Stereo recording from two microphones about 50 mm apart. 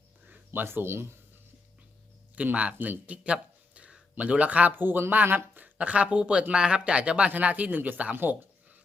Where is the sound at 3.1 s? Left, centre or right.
Right.